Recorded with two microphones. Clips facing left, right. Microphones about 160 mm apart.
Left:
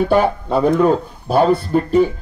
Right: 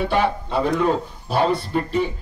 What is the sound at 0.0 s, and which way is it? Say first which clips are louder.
Speech: left 5 dB; 45° left (ahead or behind).